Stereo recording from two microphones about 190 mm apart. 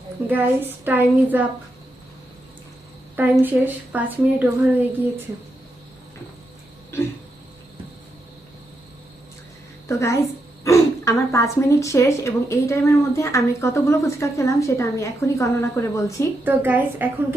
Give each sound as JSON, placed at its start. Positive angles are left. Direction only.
{"t": 0.3, "sound": "a woman's voice", "side_deg": -10}
{"t": 3.2, "sound": "a woman's voice", "side_deg": -10}
{"t": 9.9, "sound": "speech", "side_deg": 15}
{"t": 16.4, "sound": "a woman's voice", "side_deg": -10}